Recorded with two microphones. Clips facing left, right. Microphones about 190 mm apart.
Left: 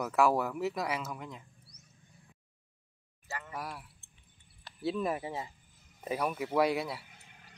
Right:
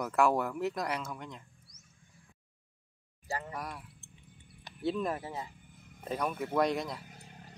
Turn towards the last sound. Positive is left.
turn(degrees=-40)  # may be behind; listen again after turning